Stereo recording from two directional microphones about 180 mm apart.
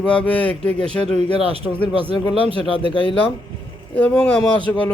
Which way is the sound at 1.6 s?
25° left (ahead or behind).